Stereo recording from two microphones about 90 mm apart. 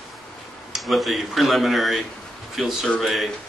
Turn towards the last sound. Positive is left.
turn(degrees=0)  # may be behind; listen again after turning